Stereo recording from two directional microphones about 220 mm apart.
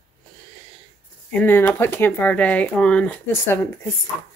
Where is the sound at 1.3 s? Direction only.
5° left (ahead or behind).